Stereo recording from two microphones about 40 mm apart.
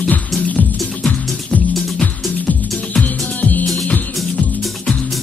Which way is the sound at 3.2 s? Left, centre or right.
Left.